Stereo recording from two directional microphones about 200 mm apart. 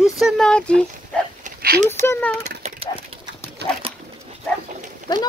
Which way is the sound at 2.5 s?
30° right (ahead or behind).